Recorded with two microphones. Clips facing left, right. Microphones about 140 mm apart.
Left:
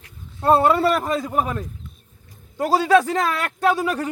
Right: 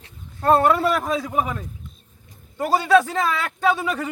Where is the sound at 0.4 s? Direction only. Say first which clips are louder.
Left 1 dB; 5° left (ahead or behind).